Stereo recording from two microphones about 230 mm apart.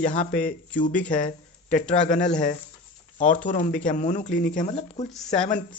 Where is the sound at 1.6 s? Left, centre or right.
Centre.